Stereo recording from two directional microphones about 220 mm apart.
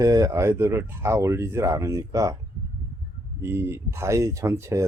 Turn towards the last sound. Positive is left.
turn(degrees=-10)  # may be behind; listen again after turning